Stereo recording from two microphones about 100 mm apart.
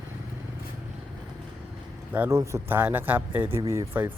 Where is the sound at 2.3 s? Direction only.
30° right (ahead or behind).